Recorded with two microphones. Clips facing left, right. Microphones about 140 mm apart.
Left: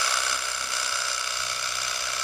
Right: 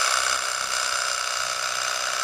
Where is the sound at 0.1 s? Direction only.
90° right.